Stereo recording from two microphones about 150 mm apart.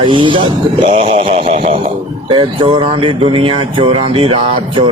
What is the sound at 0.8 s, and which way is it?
Speech, 50° right (ahead or behind).